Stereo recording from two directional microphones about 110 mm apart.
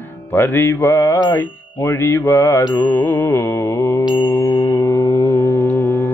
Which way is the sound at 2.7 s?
20° left (ahead or behind).